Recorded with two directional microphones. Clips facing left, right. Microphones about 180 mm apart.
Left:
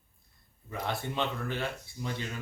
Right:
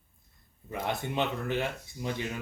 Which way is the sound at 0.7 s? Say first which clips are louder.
Right 2 dB; 15° right (ahead or behind).